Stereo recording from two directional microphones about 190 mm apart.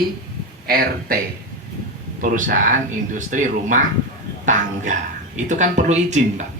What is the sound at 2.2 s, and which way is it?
Speech, 45° right (ahead or behind).